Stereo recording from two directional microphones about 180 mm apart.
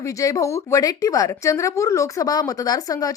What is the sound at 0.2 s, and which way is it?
Speech, 20° left (ahead or behind).